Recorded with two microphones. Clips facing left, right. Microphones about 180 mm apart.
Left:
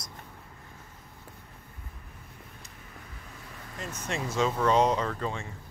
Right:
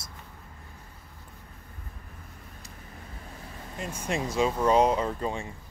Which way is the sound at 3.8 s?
10° right (ahead or behind).